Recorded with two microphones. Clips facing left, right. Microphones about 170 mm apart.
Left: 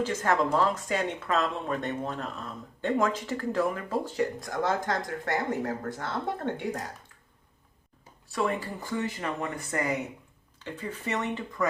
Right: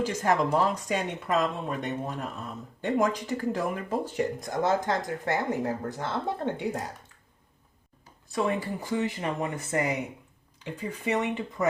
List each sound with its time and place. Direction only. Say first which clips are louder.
0.0 s speech: right 1 dB; 15° right (ahead or behind)
8.3 s speech: right 2 dB; 20° right (ahead or behind)